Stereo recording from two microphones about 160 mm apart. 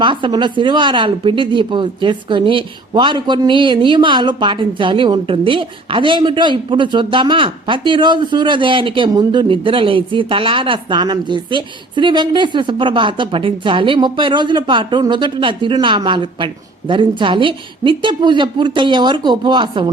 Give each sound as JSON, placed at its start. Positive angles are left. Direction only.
{"t": 0.0, "sound": "a woman's voice", "side_deg": -30}